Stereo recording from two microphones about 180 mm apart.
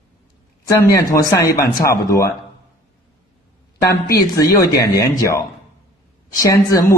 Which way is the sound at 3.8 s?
20° left (ahead or behind).